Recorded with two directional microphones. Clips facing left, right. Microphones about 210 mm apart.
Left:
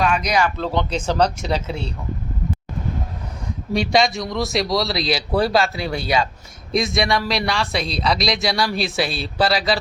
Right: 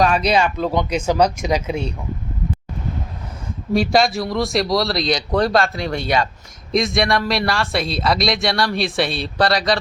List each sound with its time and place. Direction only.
0.0 s speech: 35° right (ahead or behind)
0.6 s speech: 10° right (ahead or behind)
3.7 s speech: centre (ahead or behind)